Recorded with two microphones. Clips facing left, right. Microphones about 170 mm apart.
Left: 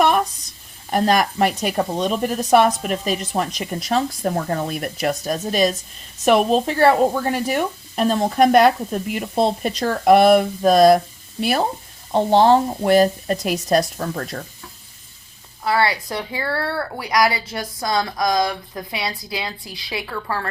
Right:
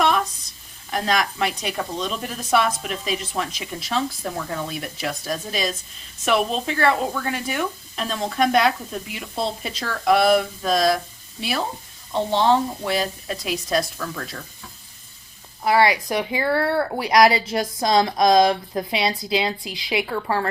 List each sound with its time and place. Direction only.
0.9 s speech: 50° left (ahead or behind)
15.6 s speech: 15° right (ahead or behind)